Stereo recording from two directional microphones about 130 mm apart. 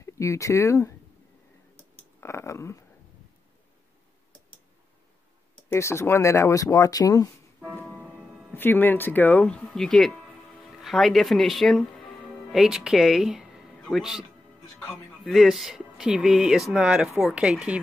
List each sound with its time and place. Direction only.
0.0 s speech: 25° left (ahead or behind)
2.1 s a sound: 20° left (ahead or behind)
5.7 s speech: 20° left (ahead or behind)
8.5 s speech: 15° left (ahead or behind); by 14.2 s centre (ahead or behind)
15.3 s speech: centre (ahead or behind)